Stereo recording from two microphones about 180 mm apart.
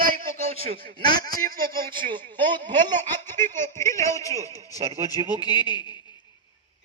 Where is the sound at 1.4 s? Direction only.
50° right (ahead or behind).